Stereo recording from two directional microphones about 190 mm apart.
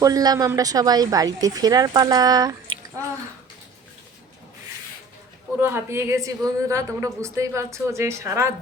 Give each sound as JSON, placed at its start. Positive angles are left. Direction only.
{"t": 0.0, "sound": "a woman's voice", "side_deg": -20}
{"t": 5.5, "sound": "a woman's voice", "side_deg": -10}